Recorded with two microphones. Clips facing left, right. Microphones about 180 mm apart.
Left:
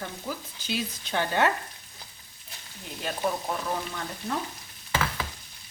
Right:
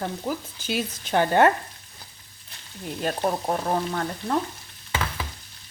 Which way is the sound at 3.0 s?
45° right (ahead or behind).